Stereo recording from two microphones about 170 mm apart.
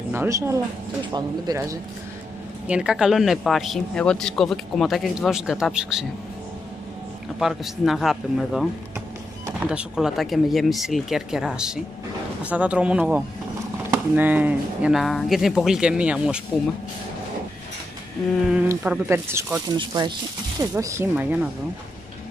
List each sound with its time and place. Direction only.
0.1 s speech: 15° right (ahead or behind)
2.7 s speech: 5° right (ahead or behind)
7.3 s speech: centre (ahead or behind)
9.7 s speech: 5° right (ahead or behind)
18.7 s speech: 15° right (ahead or behind)
20.0 s speech: 25° right (ahead or behind); by 21.5 s 10° right (ahead or behind)